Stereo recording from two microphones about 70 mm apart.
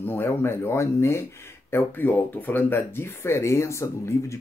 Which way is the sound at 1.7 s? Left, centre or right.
Left.